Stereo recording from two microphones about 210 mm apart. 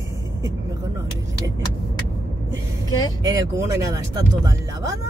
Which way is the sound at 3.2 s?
15° right (ahead or behind).